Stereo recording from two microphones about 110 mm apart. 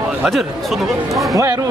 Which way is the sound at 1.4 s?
30° right (ahead or behind).